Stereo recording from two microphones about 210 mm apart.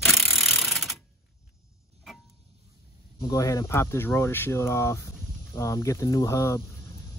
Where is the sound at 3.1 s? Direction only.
15° left (ahead or behind).